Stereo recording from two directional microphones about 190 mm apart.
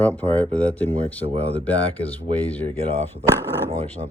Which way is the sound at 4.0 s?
35° right (ahead or behind).